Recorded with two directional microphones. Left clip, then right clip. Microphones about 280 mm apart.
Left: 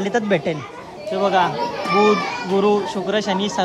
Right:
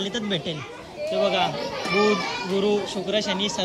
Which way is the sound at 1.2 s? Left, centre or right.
Centre.